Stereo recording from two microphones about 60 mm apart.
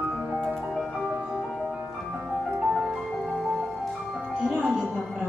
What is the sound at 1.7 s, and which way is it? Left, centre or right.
Music, right.